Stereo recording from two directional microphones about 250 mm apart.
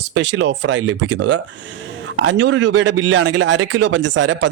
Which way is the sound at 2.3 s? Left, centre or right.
Right.